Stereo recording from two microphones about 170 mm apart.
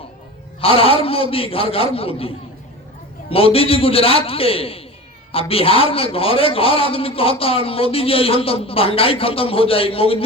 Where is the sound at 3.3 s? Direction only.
35° left (ahead or behind).